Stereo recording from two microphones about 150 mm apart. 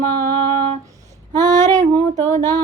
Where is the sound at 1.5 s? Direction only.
50° right (ahead or behind).